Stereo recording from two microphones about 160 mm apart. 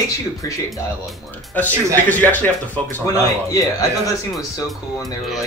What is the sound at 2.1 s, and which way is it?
Speech, 10° left (ahead or behind).